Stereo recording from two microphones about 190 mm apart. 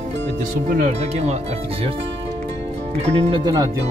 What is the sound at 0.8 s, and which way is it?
Speech, 35° right (ahead or behind).